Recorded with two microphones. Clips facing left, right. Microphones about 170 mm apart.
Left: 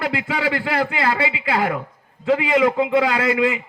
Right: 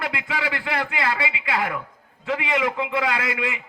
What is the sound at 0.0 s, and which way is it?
A man's voice, 35° left (ahead or behind).